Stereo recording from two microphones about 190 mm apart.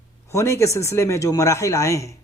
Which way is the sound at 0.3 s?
15° left (ahead or behind).